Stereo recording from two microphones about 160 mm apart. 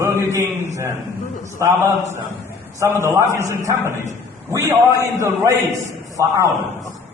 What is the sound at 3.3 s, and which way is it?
A man's voice, 15° left (ahead or behind).